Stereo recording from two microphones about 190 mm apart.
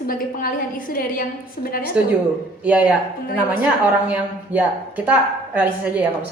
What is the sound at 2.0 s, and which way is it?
Speech, 5° right (ahead or behind).